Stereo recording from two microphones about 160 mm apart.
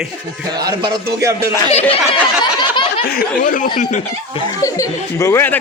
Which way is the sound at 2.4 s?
30° left (ahead or behind).